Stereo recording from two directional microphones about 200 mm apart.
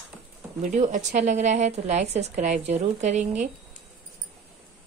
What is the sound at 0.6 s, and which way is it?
Speech, 40° right (ahead or behind).